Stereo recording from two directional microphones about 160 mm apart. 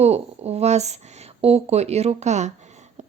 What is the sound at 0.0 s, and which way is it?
A woman's voice, 40° right (ahead or behind).